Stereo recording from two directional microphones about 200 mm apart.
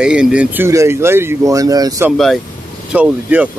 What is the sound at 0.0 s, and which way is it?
Speech, 5° right (ahead or behind).